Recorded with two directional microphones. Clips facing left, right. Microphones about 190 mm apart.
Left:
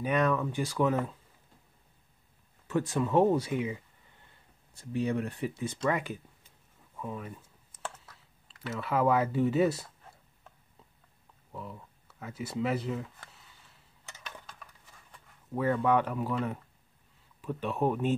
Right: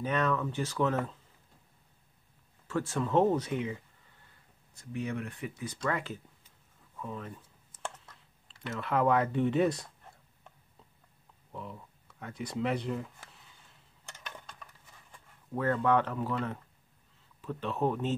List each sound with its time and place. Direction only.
0.0 s speech: 15° left (ahead or behind)
2.7 s speech: 15° left (ahead or behind)
4.7 s speech: 30° left (ahead or behind)
5.9 s speech: 15° left (ahead or behind)
7.8 s computer keyboard: 5° left (ahead or behind)
11.5 s speech: centre (ahead or behind)
14.0 s a sound: 5° left (ahead or behind)
15.5 s speech: 10° left (ahead or behind)